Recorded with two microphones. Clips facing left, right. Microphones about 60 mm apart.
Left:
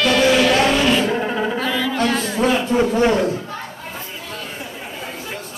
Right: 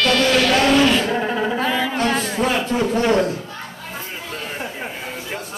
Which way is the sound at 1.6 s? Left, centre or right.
Right.